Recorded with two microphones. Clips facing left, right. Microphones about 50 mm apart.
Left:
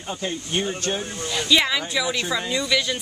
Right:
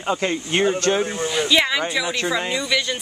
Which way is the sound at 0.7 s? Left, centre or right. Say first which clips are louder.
Right 7 dB; right.